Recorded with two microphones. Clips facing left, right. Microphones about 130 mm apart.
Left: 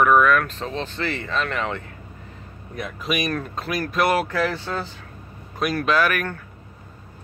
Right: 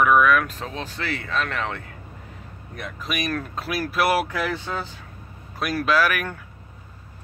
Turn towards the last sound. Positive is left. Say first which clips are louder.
# left 1 dB
turn(degrees=-5)  # may be behind; listen again after turning